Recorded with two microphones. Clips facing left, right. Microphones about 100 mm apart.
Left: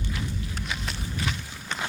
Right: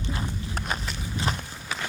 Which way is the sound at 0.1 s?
45° right (ahead or behind).